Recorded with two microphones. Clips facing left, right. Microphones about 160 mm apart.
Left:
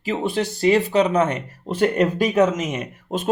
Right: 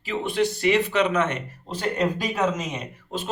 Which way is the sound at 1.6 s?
60° left (ahead or behind).